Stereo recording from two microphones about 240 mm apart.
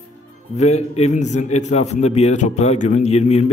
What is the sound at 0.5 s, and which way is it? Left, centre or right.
A man's voice, left.